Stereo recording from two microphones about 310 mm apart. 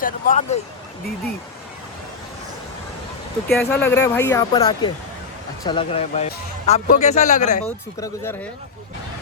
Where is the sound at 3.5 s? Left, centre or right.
Centre; by 7.6 s left.